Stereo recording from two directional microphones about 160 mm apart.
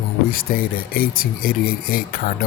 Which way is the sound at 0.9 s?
65° left (ahead or behind).